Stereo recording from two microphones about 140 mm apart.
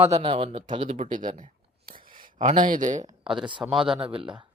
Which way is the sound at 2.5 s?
75° right (ahead or behind).